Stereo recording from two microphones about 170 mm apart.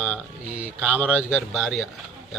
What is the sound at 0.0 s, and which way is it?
Speech, 5° right (ahead or behind).